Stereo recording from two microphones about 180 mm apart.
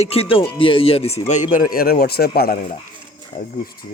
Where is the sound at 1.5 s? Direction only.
55° left (ahead or behind).